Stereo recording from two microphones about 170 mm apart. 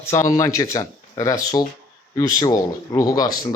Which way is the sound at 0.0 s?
15° left (ahead or behind).